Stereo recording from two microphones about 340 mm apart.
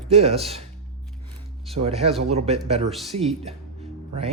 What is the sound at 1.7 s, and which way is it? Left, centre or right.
Speech, centre.